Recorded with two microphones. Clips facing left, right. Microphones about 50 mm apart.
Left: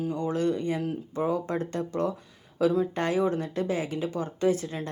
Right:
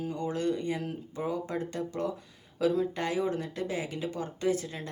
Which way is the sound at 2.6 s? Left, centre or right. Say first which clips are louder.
Left 3 dB; left.